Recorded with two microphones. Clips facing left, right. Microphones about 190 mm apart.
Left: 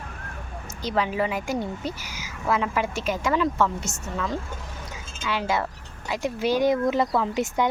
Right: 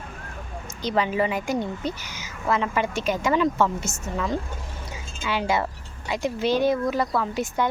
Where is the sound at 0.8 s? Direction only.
Centre (ahead or behind).